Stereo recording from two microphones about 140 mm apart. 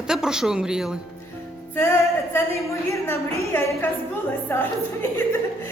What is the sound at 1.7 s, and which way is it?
A woman's voice, 15° left (ahead or behind).